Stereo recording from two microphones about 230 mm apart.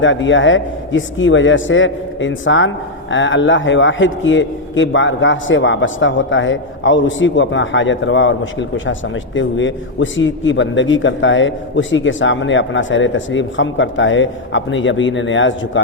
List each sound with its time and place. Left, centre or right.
0.0 s a man's voice: left